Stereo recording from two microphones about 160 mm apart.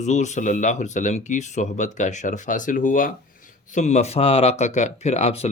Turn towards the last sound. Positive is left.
turn(degrees=40)  # may be behind; listen again after turning